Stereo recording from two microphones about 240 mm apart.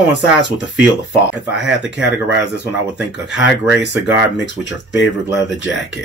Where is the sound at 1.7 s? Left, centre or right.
Centre.